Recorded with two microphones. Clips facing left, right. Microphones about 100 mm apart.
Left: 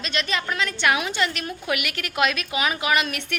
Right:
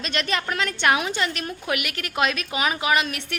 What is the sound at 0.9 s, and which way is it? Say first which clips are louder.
A woman's voice: right 2 dB; 35° right (ahead or behind).